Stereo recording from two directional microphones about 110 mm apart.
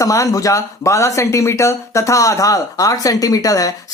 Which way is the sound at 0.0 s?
30° left (ahead or behind).